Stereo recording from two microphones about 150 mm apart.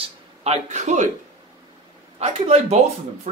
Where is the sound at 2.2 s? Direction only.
45° right (ahead or behind).